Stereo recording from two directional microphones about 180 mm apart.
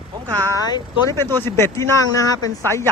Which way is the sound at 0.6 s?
20° left (ahead or behind).